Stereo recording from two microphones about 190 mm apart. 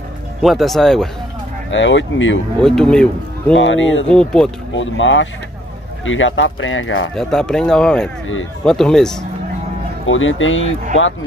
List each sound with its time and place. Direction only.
0.4 s speech: centre (ahead or behind)
1.7 s speech: 75° left (ahead or behind)
2.6 s speech: 5° left (ahead or behind)
3.5 s speech: 80° left
4.1 s speech: 5° left (ahead or behind)
4.7 s speech: 80° left
7.2 s speech: 5° left (ahead or behind)
10.0 s speech: 90° left